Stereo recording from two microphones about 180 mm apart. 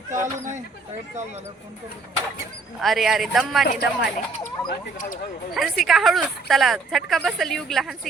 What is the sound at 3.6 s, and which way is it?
Speech, 65° left (ahead or behind).